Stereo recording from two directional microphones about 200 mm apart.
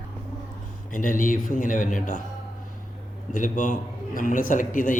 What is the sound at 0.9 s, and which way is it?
A man's voice, 40° left (ahead or behind).